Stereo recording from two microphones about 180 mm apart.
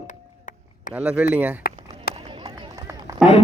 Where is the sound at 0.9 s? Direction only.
5° right (ahead or behind).